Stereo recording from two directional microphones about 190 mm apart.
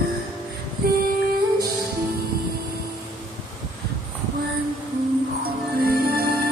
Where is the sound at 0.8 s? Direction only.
50° right (ahead or behind).